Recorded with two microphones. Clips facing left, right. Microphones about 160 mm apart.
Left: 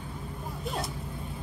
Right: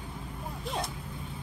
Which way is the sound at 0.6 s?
Centre (ahead or behind).